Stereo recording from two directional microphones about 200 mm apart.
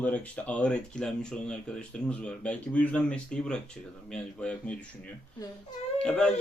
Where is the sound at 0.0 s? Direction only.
5° left (ahead or behind).